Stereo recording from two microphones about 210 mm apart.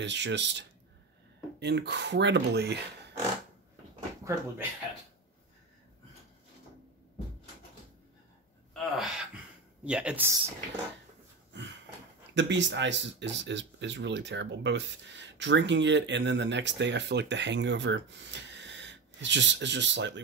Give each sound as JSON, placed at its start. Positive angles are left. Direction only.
{"t": 0.0, "sound": "speech", "side_deg": -55}
{"t": 4.2, "sound": "speech", "side_deg": -10}
{"t": 8.7, "sound": "gasp", "side_deg": 0}
{"t": 9.8, "sound": "speech", "side_deg": -5}
{"t": 12.4, "sound": "speech", "side_deg": -60}